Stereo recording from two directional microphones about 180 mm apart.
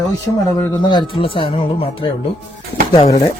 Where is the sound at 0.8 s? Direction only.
25° left (ahead or behind).